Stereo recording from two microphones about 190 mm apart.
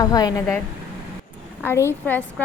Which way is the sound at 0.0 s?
20° left (ahead or behind).